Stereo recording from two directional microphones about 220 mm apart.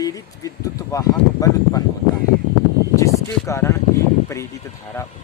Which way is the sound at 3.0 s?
15° left (ahead or behind).